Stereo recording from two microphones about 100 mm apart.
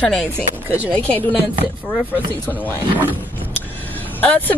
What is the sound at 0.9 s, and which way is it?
Speech, 15° left (ahead or behind).